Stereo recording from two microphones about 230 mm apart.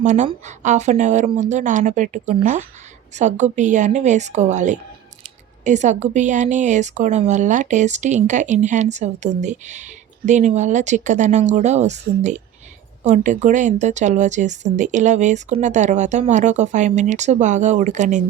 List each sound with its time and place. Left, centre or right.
0.0 s a woman's voice: right